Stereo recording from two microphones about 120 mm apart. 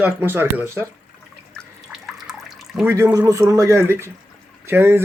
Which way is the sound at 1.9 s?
5° right (ahead or behind).